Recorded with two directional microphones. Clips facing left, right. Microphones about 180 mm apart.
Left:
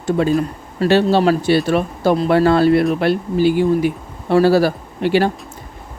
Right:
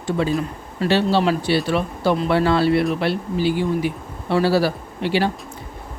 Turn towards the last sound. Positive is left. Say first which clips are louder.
# left 5 dB
turn(degrees=50)  # may be behind; listen again after turning